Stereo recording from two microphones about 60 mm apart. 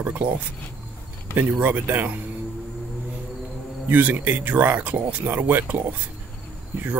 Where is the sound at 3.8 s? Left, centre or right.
Right.